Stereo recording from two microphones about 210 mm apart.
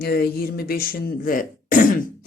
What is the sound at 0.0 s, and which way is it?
Speech, 50° left (ahead or behind).